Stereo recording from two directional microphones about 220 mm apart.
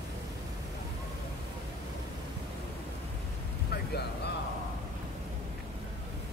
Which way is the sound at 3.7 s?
50° left (ahead or behind).